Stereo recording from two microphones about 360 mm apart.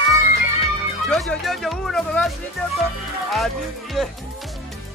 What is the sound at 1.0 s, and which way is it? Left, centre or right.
Speech, centre.